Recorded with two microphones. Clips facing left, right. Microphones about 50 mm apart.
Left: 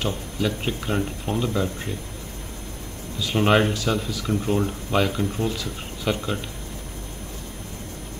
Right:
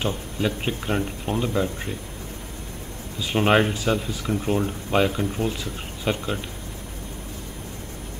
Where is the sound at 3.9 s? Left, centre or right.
Centre.